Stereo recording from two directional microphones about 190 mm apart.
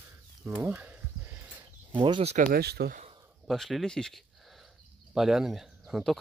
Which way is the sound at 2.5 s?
55° right (ahead or behind).